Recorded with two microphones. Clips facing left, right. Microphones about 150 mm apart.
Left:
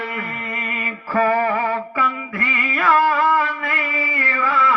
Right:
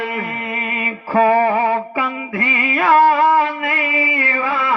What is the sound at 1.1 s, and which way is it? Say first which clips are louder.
Music: right 4 dB; 25° right (ahead or behind).